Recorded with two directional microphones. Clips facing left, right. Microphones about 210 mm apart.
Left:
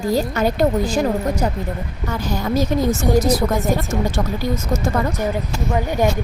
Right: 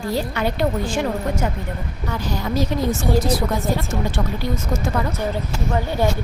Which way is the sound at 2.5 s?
45° left (ahead or behind).